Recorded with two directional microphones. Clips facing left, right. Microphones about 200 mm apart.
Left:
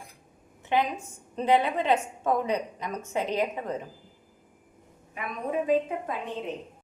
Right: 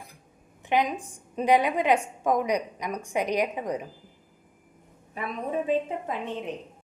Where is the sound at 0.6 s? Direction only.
15° right (ahead or behind).